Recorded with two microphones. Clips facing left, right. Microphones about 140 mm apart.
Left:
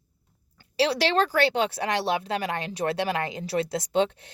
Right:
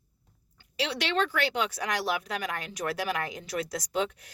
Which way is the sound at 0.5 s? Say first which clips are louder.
Left 8 dB; 35° left (ahead or behind).